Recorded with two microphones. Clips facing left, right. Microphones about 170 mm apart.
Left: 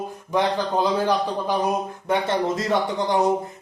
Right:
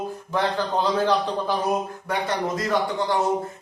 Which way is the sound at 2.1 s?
25° left (ahead or behind).